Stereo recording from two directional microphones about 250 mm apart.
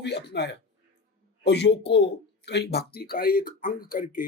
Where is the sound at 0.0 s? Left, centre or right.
Left.